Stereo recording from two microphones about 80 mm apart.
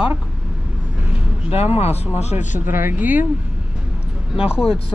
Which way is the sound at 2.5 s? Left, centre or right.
Right.